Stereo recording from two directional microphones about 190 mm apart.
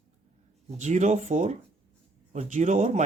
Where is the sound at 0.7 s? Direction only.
40° right (ahead or behind).